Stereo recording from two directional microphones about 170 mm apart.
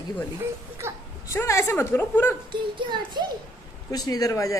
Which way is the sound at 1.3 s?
15° left (ahead or behind).